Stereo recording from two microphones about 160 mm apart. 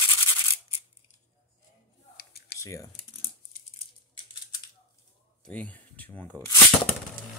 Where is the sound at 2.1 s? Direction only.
75° left (ahead or behind).